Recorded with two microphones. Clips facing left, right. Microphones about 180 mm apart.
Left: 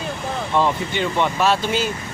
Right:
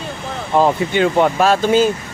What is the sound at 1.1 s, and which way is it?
Speech, 45° right (ahead or behind).